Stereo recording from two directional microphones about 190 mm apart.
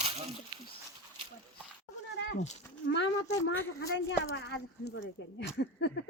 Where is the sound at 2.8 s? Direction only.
70° left (ahead or behind).